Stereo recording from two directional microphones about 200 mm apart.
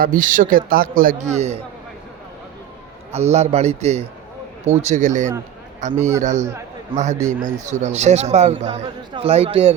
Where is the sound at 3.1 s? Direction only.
35° right (ahead or behind).